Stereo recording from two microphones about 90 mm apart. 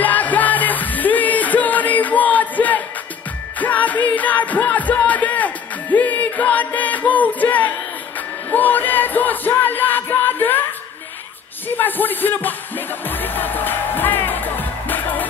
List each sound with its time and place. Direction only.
0.0 s music: 20° left (ahead or behind)
11.7 s music: 20° left (ahead or behind)